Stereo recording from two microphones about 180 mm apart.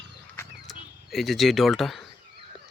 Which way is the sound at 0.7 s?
Centre (ahead or behind).